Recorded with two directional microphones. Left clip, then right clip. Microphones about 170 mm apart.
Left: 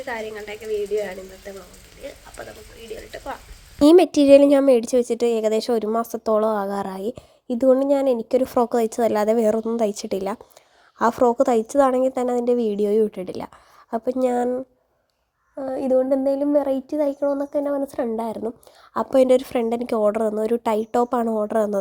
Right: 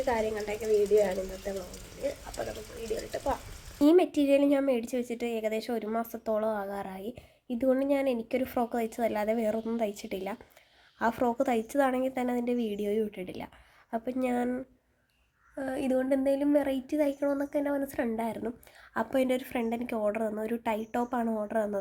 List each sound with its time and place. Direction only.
0.0 s speech: 5° right (ahead or behind)
3.8 s a woman's voice: 45° left (ahead or behind)
15.5 s a woman's voice: 20° left (ahead or behind); by 21.8 s 35° left (ahead or behind)